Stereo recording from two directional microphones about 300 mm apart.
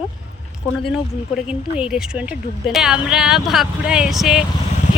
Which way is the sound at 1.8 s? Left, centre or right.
Centre.